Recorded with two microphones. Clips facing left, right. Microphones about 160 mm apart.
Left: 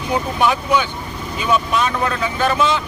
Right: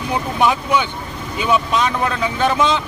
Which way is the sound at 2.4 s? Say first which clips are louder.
Right 1 dB; 20° right (ahead or behind).